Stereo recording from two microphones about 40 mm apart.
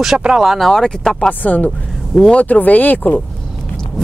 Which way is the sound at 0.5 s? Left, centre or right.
Centre.